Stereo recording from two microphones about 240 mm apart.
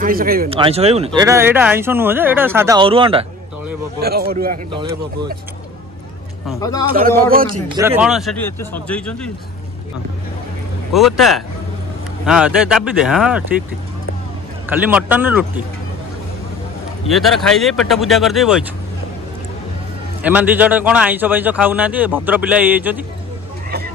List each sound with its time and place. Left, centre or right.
0.0 s speech: right
0.5 s speech: right
1.2 s a man's voice: centre
2.8 s speech: right
4.0 s speech: right
6.6 s speech: centre
6.9 s speech: right
7.4 s speech: centre
10.9 s speech: centre
14.7 s a man's voice: centre
17.1 s speech: centre
20.2 s a man's voice: centre